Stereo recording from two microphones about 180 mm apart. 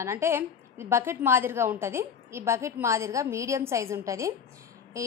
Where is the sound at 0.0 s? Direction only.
15° right (ahead or behind).